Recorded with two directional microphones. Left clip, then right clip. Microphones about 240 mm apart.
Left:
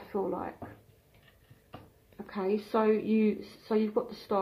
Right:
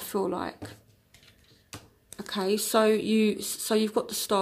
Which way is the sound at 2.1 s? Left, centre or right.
Right.